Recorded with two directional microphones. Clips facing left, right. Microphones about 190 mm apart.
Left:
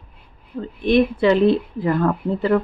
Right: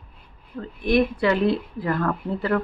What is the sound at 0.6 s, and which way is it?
Speech, 25° left (ahead or behind).